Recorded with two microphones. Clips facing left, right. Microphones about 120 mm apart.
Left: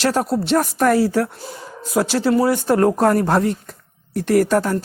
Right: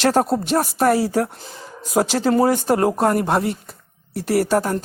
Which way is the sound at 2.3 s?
45° right (ahead or behind).